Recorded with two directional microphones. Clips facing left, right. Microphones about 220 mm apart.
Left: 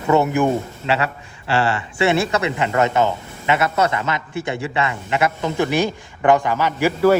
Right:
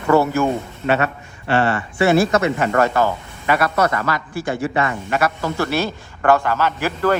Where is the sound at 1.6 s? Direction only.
30° left (ahead or behind).